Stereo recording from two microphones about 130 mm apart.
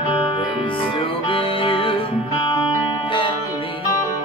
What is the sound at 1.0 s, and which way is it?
Music, 45° left (ahead or behind).